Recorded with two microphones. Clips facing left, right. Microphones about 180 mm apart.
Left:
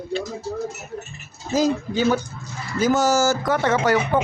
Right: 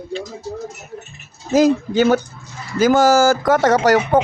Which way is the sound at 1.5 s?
75° right (ahead or behind).